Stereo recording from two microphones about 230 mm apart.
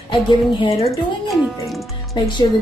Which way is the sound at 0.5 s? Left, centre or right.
Left.